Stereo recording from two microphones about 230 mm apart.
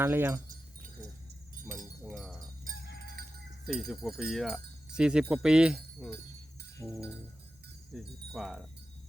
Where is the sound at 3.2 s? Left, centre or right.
Right.